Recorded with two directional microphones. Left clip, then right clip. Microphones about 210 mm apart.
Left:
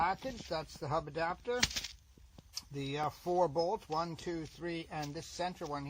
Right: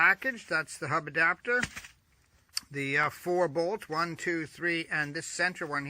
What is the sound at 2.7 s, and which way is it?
Speech, 45° right (ahead or behind).